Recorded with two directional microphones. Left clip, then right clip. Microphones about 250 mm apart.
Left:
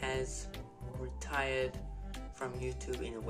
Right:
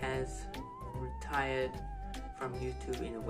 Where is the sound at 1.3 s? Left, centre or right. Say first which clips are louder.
Even; centre.